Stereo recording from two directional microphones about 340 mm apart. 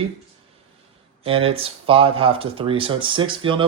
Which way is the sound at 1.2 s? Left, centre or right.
Centre.